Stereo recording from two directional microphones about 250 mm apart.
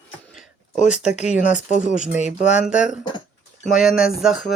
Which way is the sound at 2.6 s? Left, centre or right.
Centre.